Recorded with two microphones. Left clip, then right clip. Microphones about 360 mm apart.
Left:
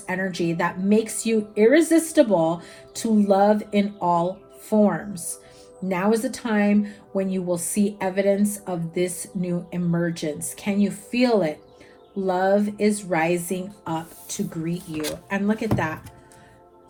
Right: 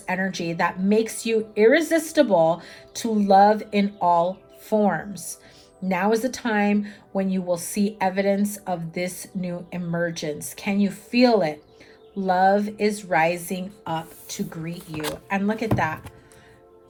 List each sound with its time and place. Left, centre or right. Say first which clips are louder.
0.0 s speech: even; right
5.9 s speech: right 1 dB; right